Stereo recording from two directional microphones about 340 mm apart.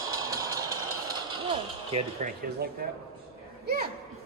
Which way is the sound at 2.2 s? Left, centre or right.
Right.